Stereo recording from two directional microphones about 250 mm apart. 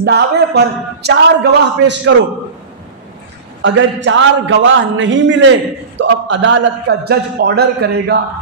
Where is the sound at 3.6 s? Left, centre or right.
Right.